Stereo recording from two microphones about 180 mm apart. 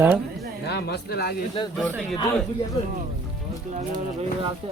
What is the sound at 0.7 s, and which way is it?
Speech, 65° left (ahead or behind).